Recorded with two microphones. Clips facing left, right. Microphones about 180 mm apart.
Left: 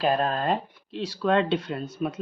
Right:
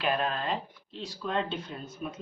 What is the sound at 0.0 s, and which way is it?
Speech, 40° left (ahead or behind).